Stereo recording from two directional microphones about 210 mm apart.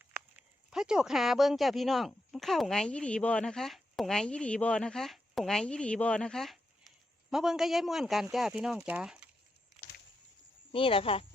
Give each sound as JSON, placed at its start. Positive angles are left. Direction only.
{"t": 0.0, "sound": "speech", "side_deg": -5}
{"t": 10.7, "sound": "speech", "side_deg": 25}